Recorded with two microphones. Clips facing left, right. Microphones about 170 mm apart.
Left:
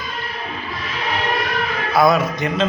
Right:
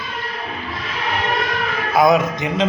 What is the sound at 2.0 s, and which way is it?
Music, 20° right (ahead or behind).